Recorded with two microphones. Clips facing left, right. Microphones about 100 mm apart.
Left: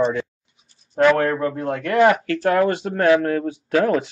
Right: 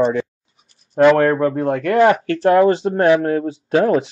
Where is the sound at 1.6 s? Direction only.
40° right (ahead or behind).